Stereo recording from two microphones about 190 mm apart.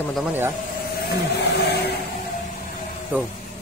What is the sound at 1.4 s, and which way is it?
Vehicle, 60° left (ahead or behind).